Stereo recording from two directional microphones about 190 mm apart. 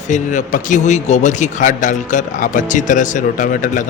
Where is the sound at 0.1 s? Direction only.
40° left (ahead or behind).